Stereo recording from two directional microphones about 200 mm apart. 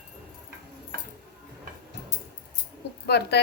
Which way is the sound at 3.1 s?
55° left (ahead or behind).